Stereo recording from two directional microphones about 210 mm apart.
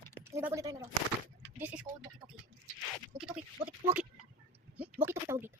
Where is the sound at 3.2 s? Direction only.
5° right (ahead or behind).